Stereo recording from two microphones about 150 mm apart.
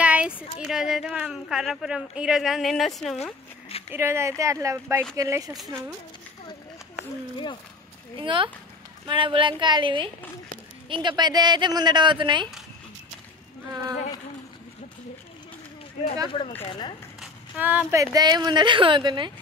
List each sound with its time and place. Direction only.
0.0 s a woman's voice: 10° right (ahead or behind)
3.9 s speech: 15° right (ahead or behind)
8.2 s speech: 35° right (ahead or behind)
16.3 s speech: 35° left (ahead or behind)
17.2 s a sound: 10° right (ahead or behind)
17.9 s speech: 25° right (ahead or behind)